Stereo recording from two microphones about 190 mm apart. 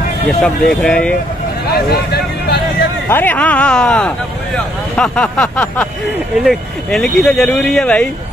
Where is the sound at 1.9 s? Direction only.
55° left (ahead or behind).